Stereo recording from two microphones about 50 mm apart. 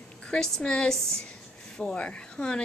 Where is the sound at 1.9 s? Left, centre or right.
Left.